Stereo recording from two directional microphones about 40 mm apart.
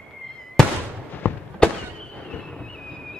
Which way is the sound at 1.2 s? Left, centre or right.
Left.